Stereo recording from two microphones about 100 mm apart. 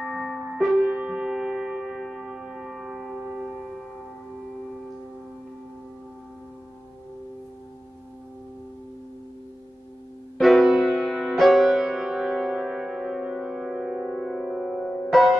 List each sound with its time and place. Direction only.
0.0 s music: centre (ahead or behind)
10.4 s music: centre (ahead or behind)